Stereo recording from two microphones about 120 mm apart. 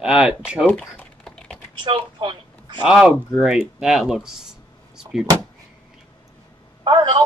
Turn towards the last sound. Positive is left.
turn(degrees=-40)  # may be behind; listen again after turning